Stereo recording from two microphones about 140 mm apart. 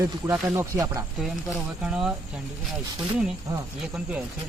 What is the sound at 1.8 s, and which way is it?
Speech, 5° right (ahead or behind).